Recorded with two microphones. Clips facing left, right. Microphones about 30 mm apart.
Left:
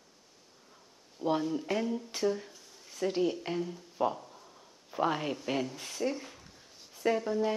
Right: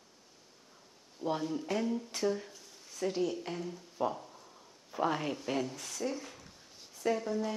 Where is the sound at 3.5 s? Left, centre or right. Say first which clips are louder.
Left 4 dB; centre.